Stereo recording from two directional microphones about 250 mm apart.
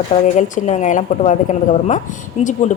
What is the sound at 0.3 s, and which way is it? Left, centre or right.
A woman's voice, left.